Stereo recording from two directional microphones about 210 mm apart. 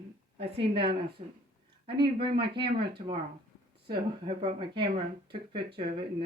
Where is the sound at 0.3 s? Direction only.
25° right (ahead or behind).